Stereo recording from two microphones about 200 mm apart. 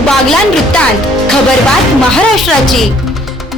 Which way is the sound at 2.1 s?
Centre (ahead or behind).